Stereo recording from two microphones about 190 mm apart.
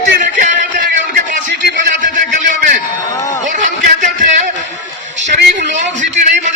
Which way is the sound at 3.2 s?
15° left (ahead or behind).